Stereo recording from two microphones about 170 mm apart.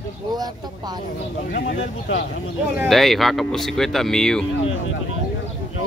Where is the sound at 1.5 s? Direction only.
75° left (ahead or behind); by 2.2 s 90° left.